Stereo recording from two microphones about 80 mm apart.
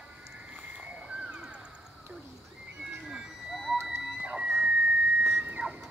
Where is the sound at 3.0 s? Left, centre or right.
Centre.